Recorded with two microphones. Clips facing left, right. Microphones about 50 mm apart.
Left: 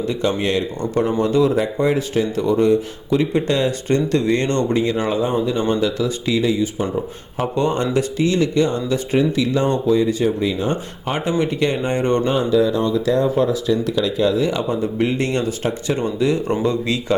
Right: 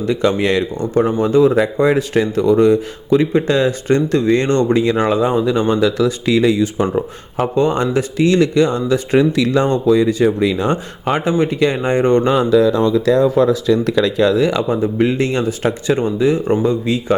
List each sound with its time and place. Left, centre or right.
0.1 s speech: right
1.5 s speech: right
7.3 s speech: right
8.3 s speech: right
9.1 s speech: right
10.7 s speech: right
12.2 s speech: right
12.5 s speech: right
13.1 s speech: right
14.7 s speech: right; by 17.2 s centre